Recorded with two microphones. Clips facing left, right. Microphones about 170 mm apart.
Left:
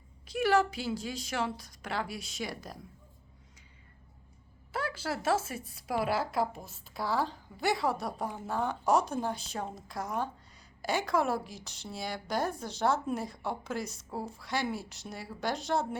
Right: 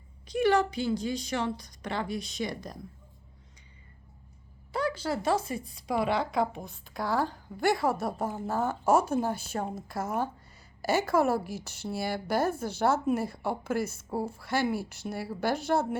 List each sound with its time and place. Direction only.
0.3 s speech: 5° left (ahead or behind)
4.7 s speech: 5° left (ahead or behind)
14.8 s speech: 60° right (ahead or behind)
15.6 s speech: 5° right (ahead or behind)